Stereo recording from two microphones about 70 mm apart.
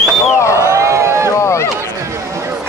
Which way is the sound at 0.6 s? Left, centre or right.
Right.